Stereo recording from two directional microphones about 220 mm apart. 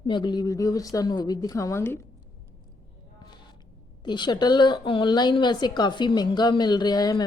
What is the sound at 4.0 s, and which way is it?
Speech, 20° left (ahead or behind).